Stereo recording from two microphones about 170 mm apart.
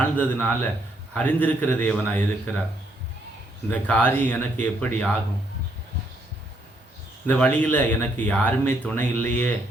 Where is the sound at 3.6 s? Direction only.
10° left (ahead or behind).